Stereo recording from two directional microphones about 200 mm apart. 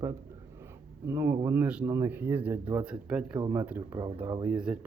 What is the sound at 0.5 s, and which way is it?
Speech, 10° right (ahead or behind).